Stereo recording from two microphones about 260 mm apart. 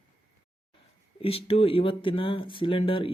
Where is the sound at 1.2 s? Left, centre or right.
Left.